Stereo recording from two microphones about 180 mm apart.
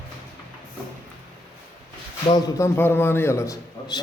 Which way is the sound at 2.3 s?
15° left (ahead or behind).